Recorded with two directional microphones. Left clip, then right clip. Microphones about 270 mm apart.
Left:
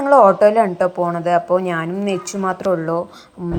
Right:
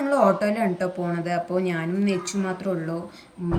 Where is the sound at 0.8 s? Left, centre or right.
Left.